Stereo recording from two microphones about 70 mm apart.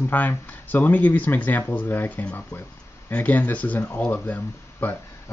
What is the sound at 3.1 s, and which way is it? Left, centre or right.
Speech, left.